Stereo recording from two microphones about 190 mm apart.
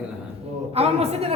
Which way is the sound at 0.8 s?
35° right (ahead or behind).